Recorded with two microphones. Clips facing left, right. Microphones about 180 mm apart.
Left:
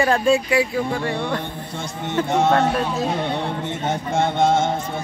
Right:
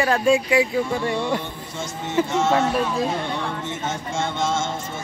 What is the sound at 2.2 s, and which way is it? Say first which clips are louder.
Speech: left 3 dB; 60° left (ahead or behind).